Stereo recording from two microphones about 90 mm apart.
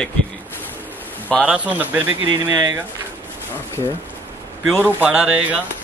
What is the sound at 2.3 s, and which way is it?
Speech, 45° right (ahead or behind).